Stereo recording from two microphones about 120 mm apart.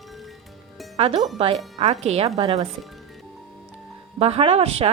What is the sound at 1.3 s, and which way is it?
Speech, 55° right (ahead or behind).